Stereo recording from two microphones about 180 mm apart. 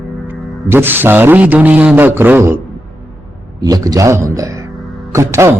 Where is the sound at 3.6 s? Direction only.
20° right (ahead or behind).